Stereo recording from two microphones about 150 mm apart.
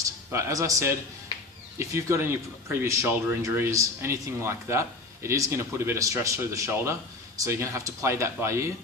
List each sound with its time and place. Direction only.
0.0 s a man's voice: 20° right (ahead or behind)